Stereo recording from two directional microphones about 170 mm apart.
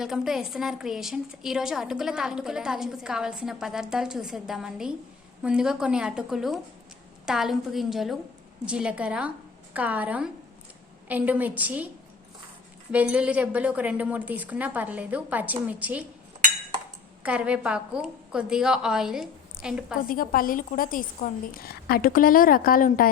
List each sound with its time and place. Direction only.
0.0 s a woman's voice: centre (ahead or behind)
12.9 s a woman's voice: 10° right (ahead or behind)
17.2 s a woman's voice: 5° right (ahead or behind)
20.0 s a woman's voice: 55° left (ahead or behind)